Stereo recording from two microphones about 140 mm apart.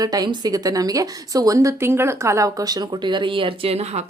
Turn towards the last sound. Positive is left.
turn(degrees=-45)  # may be behind; listen again after turning